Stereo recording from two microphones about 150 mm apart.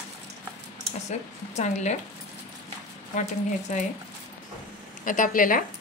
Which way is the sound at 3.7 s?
55° left (ahead or behind).